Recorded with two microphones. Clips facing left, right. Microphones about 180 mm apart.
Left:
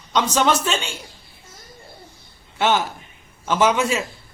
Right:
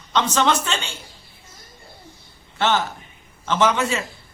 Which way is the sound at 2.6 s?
10° left (ahead or behind).